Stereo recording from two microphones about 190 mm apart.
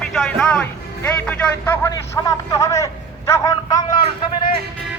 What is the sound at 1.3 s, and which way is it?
A man's voice, 10° left (ahead or behind).